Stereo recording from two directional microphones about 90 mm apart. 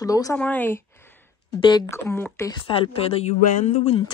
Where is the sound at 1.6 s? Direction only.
50° left (ahead or behind).